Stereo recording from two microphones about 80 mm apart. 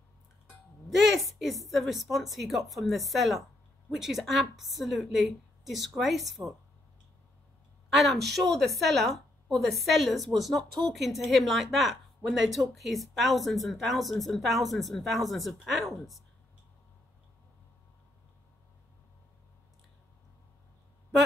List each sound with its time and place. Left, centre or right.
0.8 s a woman's voice: centre
7.9 s a woman's voice: centre